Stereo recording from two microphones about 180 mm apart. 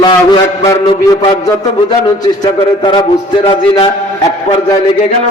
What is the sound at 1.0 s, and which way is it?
A man's voice, 20° left (ahead or behind).